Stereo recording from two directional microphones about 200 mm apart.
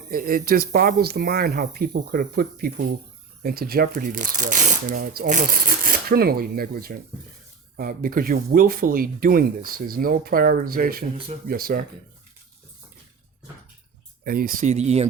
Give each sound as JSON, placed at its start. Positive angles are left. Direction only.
{"t": 0.1, "sound": "speech", "side_deg": -45}
{"t": 14.3, "sound": "speech", "side_deg": -45}